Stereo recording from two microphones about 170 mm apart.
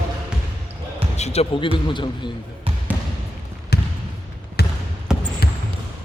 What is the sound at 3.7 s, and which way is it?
Trickle, 75° left (ahead or behind).